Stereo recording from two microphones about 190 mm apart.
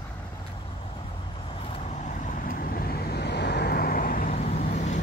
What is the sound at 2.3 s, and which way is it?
Vehicle, 45° left (ahead or behind).